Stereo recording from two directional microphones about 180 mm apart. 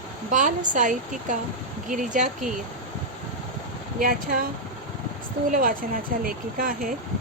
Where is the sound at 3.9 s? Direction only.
50° right (ahead or behind).